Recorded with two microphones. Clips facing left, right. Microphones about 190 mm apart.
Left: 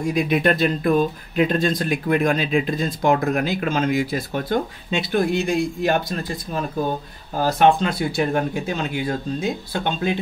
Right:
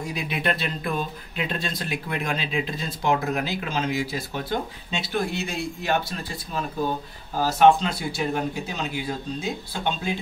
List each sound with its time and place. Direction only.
0.0 s speech: 50° left (ahead or behind)
7.4 s speech: 55° left (ahead or behind)